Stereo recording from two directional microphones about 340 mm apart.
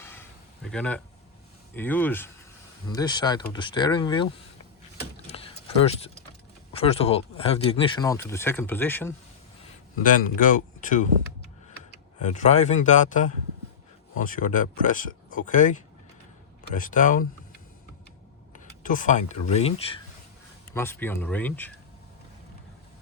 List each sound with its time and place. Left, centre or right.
0.0 s a sound: centre
1.7 s speech: centre
5.3 s a sound: centre
6.7 s speech: centre
10.0 s speech: left
12.2 s speech: left
18.5 s speech: left
20.7 s speech: centre